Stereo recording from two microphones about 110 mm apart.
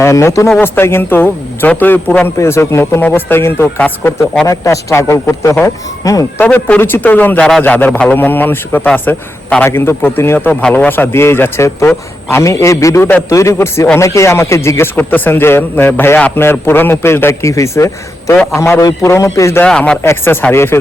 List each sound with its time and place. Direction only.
0.0 s a man's voice: 25° left (ahead or behind)
6.4 s a man's voice: 15° left (ahead or behind)
9.6 s a man's voice: 20° left (ahead or behind)
19.6 s a man's voice: 10° left (ahead or behind)
20.0 s a man's voice: 20° left (ahead or behind)